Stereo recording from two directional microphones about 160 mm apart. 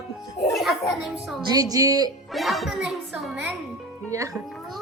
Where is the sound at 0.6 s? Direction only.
Centre (ahead or behind).